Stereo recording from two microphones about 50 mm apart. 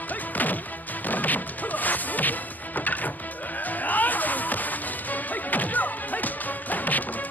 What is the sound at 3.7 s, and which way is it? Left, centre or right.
Music, left.